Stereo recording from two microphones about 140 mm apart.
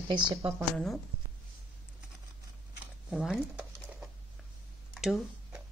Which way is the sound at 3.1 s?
5° right (ahead or behind).